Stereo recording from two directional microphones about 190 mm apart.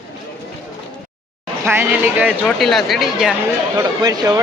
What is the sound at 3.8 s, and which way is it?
Speech, 20° right (ahead or behind).